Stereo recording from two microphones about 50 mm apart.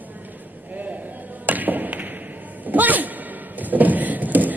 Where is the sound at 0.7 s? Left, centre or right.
Right.